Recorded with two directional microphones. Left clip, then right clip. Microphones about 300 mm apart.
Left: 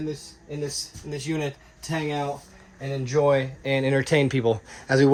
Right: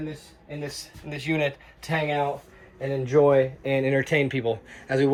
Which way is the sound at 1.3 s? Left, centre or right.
Right.